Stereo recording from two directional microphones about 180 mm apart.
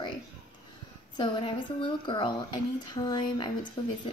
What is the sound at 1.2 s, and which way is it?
A woman's voice, 25° left (ahead or behind).